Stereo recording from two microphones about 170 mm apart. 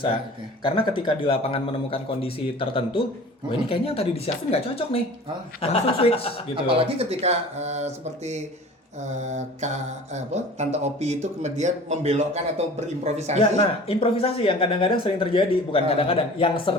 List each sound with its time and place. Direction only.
0.6 s speech: 30° left (ahead or behind)
6.7 s speech: 35° right (ahead or behind)
9.0 s mantra: 45° right (ahead or behind)
13.1 s speech: 40° right (ahead or behind)
13.4 s speech: 35° left (ahead or behind)